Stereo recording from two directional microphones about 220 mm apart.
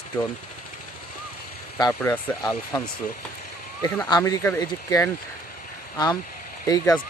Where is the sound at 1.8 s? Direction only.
15° left (ahead or behind).